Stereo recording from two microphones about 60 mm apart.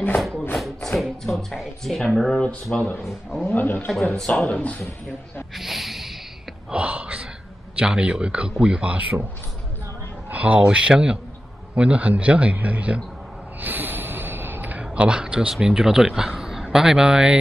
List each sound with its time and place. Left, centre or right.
0.9 s speech: centre
2.7 s a man's voice: centre
3.1 s speech: centre
3.4 s speech: left
3.9 s a man's voice: centre
4.5 s speech: left
5.6 s speech: centre
6.7 s a sound: right
7.7 s a man's voice: centre
10.3 s a man's voice: right
13.6 s snort: right; by 15.5 s centre
15.5 s a man's voice: centre